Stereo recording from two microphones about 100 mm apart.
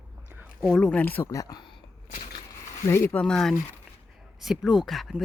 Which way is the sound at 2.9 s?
25° left (ahead or behind).